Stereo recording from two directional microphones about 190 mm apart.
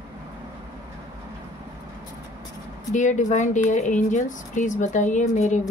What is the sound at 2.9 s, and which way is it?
A woman's voice, 40° left (ahead or behind).